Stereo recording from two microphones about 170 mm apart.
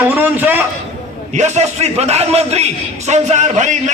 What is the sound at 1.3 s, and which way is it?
A man's voice, 40° right (ahead or behind).